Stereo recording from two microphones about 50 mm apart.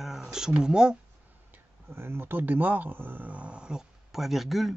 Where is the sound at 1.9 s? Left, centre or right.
Right; by 3.8 s centre.